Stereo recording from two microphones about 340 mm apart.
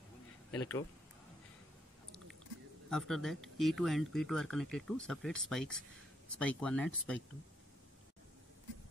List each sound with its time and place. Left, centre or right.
0.5 s speech: centre
2.9 s speech: centre